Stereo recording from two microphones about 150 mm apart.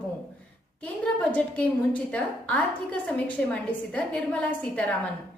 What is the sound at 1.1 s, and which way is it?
A woman's voice, 10° left (ahead or behind).